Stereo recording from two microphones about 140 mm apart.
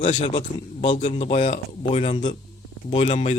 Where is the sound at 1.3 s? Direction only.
60° left (ahead or behind).